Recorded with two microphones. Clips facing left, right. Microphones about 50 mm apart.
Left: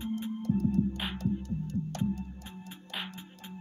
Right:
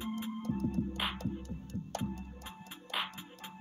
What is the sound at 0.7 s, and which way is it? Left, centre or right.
Music, centre.